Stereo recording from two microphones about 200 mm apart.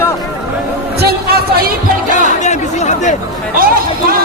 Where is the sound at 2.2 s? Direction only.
35° left (ahead or behind).